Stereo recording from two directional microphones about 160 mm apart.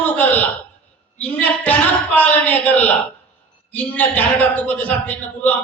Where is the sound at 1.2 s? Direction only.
10° left (ahead or behind).